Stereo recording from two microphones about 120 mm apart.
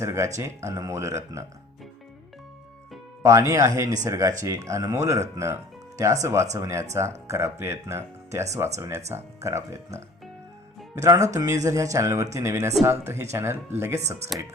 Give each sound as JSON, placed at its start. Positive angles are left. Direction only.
{"t": 0.0, "sound": "speech", "side_deg": -25}
{"t": 3.2, "sound": "speech", "side_deg": -25}